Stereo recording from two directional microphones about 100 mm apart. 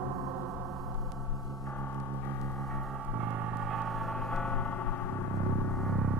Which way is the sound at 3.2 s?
5° right (ahead or behind).